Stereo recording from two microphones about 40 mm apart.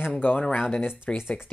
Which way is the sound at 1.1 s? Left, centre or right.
Left.